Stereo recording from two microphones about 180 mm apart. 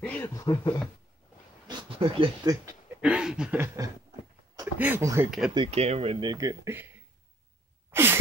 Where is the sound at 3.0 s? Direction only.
5° right (ahead or behind).